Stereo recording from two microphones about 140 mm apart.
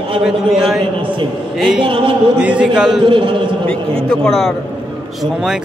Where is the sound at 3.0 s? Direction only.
35° right (ahead or behind).